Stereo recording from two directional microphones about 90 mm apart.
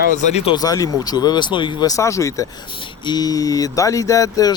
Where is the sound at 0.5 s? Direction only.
45° left (ahead or behind); by 1.8 s 60° left (ahead or behind).